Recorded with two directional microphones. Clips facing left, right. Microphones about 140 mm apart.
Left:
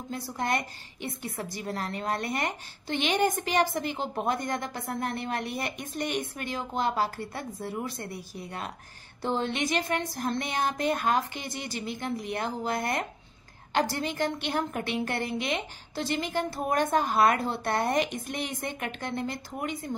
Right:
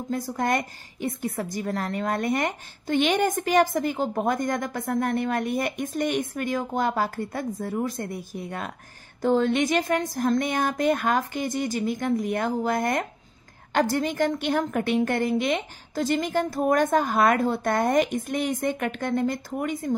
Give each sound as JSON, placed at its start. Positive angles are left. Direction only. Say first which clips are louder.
{"t": 0.1, "sound": "a woman's voice", "louder": "right 5 dB", "side_deg": -45}